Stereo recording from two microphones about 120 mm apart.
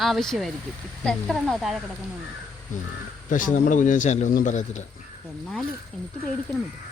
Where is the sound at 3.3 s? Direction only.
90° left.